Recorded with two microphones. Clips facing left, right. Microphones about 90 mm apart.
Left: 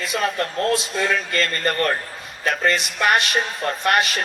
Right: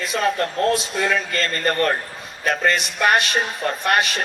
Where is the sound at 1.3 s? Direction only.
35° right (ahead or behind).